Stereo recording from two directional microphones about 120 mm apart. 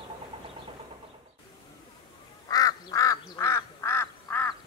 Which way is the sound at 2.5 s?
30° left (ahead or behind).